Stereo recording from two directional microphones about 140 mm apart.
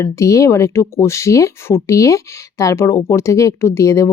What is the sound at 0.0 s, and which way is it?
Speech, 20° left (ahead or behind).